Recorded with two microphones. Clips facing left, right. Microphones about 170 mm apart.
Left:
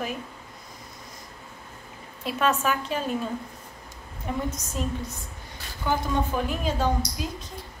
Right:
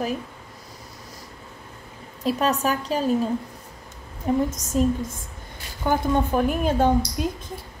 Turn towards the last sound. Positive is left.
turn(degrees=-55)  # may be behind; listen again after turning